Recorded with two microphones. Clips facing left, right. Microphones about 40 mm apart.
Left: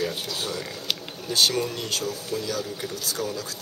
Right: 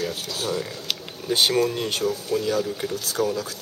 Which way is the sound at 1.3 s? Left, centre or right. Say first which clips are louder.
Right 3 dB; right.